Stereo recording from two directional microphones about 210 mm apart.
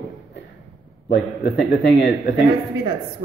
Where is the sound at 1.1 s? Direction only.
50° left (ahead or behind).